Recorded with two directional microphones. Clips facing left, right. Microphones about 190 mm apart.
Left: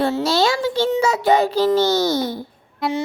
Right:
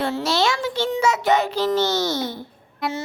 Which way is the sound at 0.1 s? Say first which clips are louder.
Left 3 dB; 35° left (ahead or behind).